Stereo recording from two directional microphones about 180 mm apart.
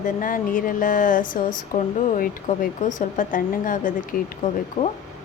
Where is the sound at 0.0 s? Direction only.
50° left (ahead or behind).